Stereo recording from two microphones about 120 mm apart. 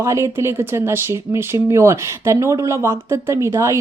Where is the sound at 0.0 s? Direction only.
25° right (ahead or behind).